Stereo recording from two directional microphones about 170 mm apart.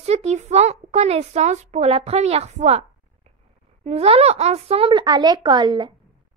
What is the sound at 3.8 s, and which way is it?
Speech, 35° right (ahead or behind).